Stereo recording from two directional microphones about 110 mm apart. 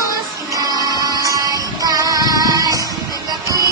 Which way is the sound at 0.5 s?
35° right (ahead or behind).